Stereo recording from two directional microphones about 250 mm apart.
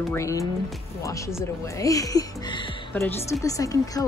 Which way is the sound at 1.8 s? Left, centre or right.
Centre.